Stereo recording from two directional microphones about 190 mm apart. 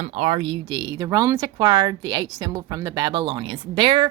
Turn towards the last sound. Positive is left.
turn(degrees=-25)  # may be behind; listen again after turning